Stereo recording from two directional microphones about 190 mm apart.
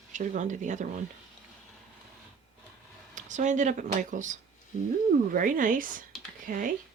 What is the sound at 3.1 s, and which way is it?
Speech, 40° right (ahead or behind).